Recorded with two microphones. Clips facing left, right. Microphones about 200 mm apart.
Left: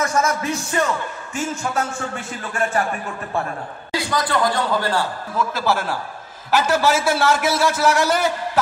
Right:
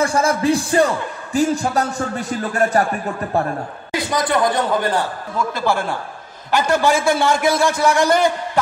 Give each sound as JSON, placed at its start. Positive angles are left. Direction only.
{"t": 0.0, "sound": "speech", "side_deg": -30}
{"t": 3.9, "sound": "speech", "side_deg": -20}
{"t": 5.4, "sound": "a man's voice", "side_deg": 5}